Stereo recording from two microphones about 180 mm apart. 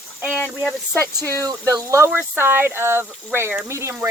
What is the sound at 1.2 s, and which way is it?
Speech, 15° left (ahead or behind).